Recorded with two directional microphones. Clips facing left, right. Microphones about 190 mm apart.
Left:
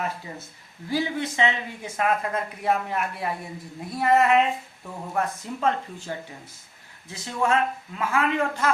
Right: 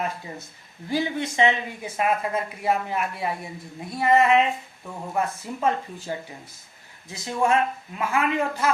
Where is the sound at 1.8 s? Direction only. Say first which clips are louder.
Even; 10° right (ahead or behind).